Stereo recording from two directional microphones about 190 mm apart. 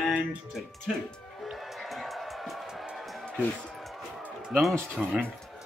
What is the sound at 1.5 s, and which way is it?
Music, centre (ahead or behind).